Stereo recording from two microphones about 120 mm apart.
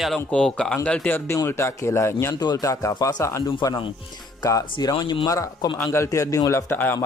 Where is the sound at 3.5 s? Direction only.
40° left (ahead or behind).